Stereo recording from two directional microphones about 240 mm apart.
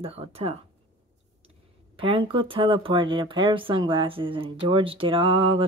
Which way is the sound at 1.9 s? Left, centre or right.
Right.